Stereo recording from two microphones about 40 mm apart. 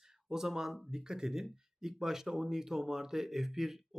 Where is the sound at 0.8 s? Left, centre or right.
Centre.